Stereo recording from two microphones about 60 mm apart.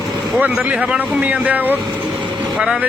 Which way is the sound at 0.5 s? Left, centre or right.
Centre.